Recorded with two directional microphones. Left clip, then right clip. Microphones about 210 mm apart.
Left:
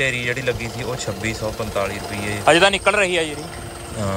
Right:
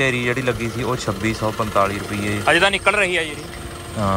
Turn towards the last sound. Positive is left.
turn(degrees=15)  # may be behind; listen again after turning